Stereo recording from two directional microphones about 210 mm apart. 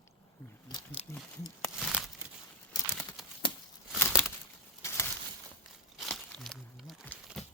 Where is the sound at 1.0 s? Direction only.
30° left (ahead or behind).